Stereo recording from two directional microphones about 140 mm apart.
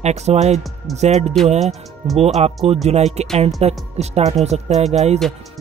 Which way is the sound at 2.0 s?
40° right (ahead or behind).